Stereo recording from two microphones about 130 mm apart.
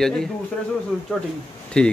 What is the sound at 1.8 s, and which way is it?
Speech, 5° left (ahead or behind).